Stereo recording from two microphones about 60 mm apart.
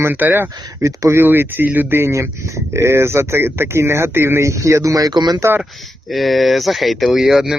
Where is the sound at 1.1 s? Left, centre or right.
Right.